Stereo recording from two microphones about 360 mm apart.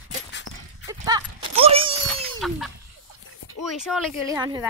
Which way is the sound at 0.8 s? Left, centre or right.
Centre.